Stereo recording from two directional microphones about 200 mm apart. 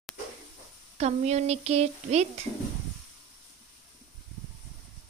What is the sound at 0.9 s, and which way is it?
Speech, 35° right (ahead or behind).